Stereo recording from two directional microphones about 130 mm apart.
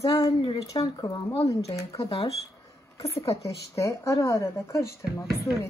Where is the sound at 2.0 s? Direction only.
50° left (ahead or behind).